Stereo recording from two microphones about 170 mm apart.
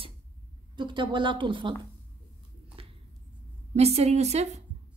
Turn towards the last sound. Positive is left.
turn(degrees=-40)  # may be behind; listen again after turning